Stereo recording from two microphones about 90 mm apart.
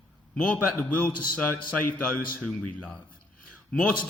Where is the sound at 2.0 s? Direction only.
5° left (ahead or behind).